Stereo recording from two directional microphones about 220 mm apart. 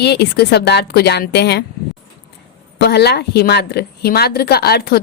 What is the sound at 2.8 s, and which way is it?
A woman's voice, 50° left (ahead or behind).